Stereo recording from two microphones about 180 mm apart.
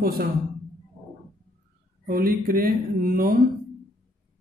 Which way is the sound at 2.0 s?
55° right (ahead or behind).